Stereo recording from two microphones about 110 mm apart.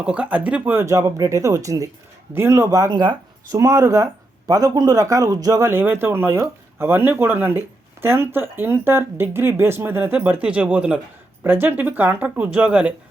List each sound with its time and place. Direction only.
0.0 s speech: 10° right (ahead or behind); by 3.2 s 40° right (ahead or behind)
3.5 s speech: 30° right (ahead or behind); by 12.9 s 10° right (ahead or behind)